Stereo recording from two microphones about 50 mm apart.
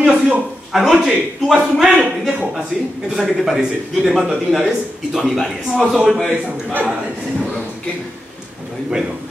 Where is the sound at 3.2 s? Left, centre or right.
Centre.